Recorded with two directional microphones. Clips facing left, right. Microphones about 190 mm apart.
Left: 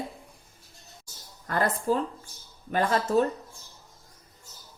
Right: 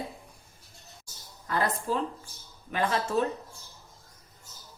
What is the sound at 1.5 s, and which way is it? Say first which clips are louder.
Speech: left 3 dB; 45° left (ahead or behind).